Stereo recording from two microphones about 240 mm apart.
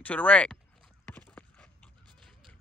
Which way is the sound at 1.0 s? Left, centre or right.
Centre.